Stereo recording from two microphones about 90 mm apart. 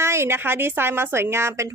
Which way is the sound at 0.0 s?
30° right (ahead or behind).